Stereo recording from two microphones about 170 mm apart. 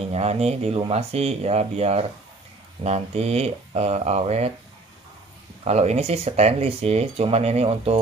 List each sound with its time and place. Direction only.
0.1 s speech: 40° right (ahead or behind)
5.6 s speech: 40° right (ahead or behind)